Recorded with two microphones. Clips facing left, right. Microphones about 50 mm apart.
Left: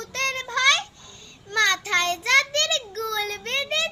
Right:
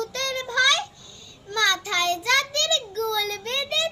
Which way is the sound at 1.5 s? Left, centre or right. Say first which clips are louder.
Left 2 dB; left.